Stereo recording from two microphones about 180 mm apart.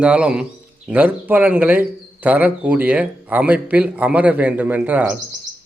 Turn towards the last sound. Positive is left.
turn(degrees=-5)  # may be behind; listen again after turning